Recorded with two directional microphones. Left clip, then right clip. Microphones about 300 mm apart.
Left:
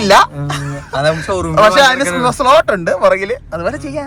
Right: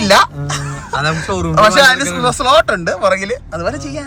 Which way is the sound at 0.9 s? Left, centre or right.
Left.